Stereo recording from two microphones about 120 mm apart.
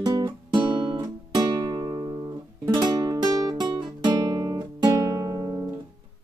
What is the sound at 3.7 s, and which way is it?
Guitar, 40° right (ahead or behind).